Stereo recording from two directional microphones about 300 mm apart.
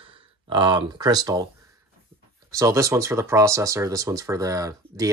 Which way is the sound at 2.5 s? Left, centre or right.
Centre.